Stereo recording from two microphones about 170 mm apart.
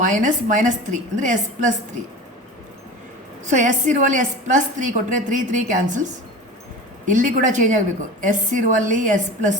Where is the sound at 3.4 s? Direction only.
45° right (ahead or behind).